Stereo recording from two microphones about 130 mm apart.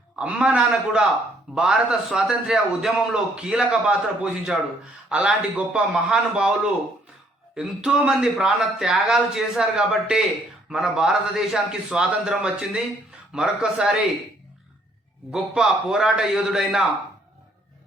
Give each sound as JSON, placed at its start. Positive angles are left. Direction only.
{"t": 0.2, "sound": "a man's voice", "side_deg": -10}
{"t": 7.5, "sound": "a man's voice", "side_deg": -5}
{"t": 15.3, "sound": "a man's voice", "side_deg": 0}